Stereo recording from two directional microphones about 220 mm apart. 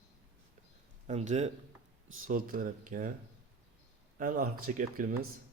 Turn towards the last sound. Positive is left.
turn(degrees=-40)  # may be behind; listen again after turning